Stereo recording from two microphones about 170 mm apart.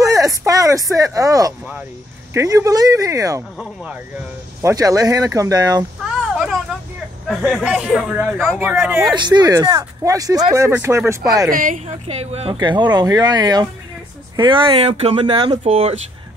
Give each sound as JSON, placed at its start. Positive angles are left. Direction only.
{"t": 0.0, "sound": "a sound", "side_deg": -20}
{"t": 2.3, "sound": "speech", "side_deg": -20}
{"t": 3.5, "sound": "speech", "side_deg": -5}
{"t": 4.6, "sound": "speech", "side_deg": -20}
{"t": 6.0, "sound": "a sound", "side_deg": -5}
{"t": 7.2, "sound": "speech", "side_deg": 0}
{"t": 9.1, "sound": "speech", "side_deg": -25}
{"t": 11.5, "sound": "speech", "side_deg": -50}
{"t": 12.5, "sound": "speech", "side_deg": -25}